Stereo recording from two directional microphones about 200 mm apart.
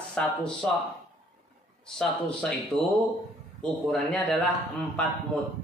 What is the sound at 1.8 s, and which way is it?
Speech, 5° left (ahead or behind).